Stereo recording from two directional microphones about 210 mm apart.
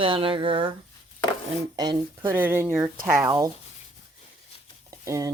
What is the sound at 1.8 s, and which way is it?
Speech, 15° right (ahead or behind).